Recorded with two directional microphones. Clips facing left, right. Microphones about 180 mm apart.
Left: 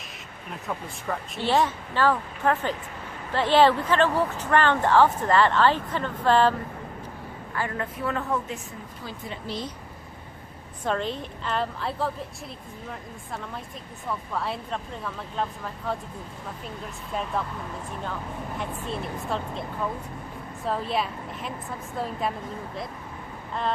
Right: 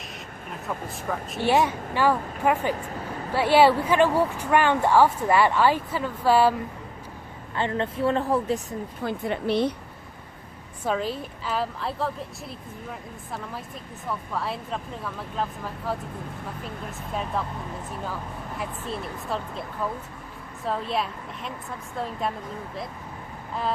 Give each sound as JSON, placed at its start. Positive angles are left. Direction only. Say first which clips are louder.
{"t": 0.5, "sound": "speech", "louder": "right 1 dB", "side_deg": 0}
{"t": 1.4, "sound": "speech", "louder": "right 2 dB", "side_deg": -15}
{"t": 7.5, "sound": "a woman's voice", "louder": "right 4 dB", "side_deg": -25}
{"t": 9.0, "sound": "speech", "louder": "right 9 dB", "side_deg": -60}
{"t": 10.8, "sound": "speech", "louder": "right 1 dB", "side_deg": -5}
{"t": 18.6, "sound": "speech", "louder": "right 1 dB", "side_deg": 0}
{"t": 20.7, "sound": "speech", "louder": "even", "side_deg": 0}